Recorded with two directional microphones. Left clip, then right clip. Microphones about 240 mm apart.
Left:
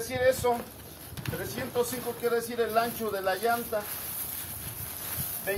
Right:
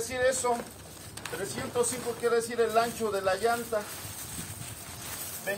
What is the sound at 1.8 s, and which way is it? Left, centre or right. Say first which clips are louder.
Speech: right 1 dB; centre.